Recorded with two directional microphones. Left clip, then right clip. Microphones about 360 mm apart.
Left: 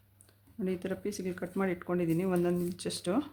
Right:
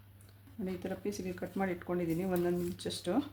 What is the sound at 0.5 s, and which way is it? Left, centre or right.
Speech, centre.